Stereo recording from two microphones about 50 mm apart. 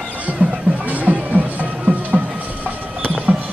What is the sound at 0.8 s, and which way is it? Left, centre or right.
Music, right.